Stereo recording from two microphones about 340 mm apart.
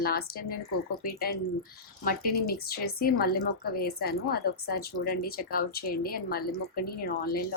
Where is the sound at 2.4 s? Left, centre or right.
Left.